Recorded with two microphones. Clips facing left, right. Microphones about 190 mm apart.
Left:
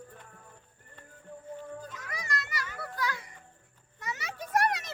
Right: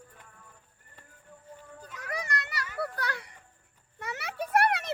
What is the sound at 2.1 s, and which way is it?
Children playing, 60° right (ahead or behind).